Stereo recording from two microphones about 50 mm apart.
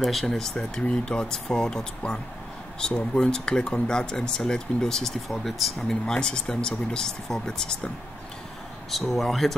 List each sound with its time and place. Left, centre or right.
0.0 s speech: centre
5.9 s speech: centre
8.9 s speech: centre